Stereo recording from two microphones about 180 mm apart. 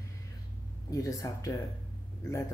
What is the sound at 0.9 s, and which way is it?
Speech, 20° left (ahead or behind).